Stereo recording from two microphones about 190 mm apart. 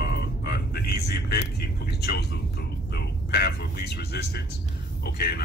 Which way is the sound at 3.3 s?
60° left (ahead or behind).